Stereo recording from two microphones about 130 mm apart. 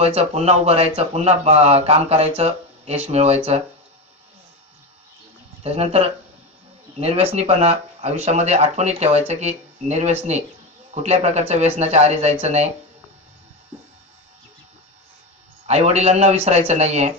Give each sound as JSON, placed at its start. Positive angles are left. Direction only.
{"t": 0.0, "sound": "speech", "side_deg": -50}
{"t": 5.6, "sound": "speech", "side_deg": -50}
{"t": 15.6, "sound": "speech", "side_deg": -55}